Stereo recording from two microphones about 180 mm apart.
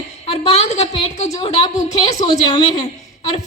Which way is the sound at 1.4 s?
25° left (ahead or behind).